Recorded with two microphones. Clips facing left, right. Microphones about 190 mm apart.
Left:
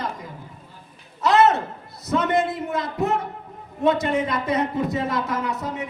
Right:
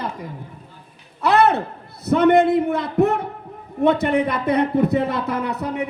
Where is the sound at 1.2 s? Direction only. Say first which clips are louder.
Right 1 dB; 60° right (ahead or behind).